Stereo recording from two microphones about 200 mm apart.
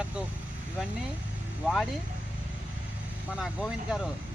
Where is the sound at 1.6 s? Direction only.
5° right (ahead or behind).